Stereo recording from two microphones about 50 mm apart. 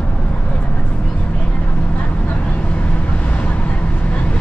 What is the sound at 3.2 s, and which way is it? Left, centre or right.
Vehicle, left.